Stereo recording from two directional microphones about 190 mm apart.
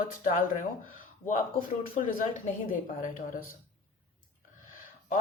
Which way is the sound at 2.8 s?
45° left (ahead or behind).